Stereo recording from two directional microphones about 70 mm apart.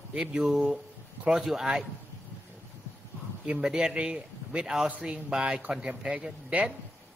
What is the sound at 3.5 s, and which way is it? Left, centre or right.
A man's voice, centre.